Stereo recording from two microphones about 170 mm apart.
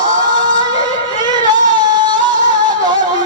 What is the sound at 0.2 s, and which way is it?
Music, 25° right (ahead or behind).